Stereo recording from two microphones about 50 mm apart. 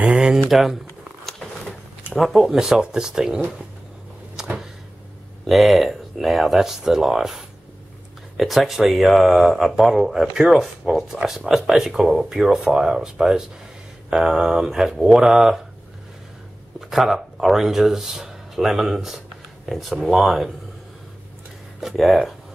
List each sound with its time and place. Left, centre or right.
0.0 s speech: centre
0.5 s speech: centre
2.1 s speech: centre
4.4 s a sound: centre
5.5 s speech: centre
16.9 s speech: centre
21.9 s speech: centre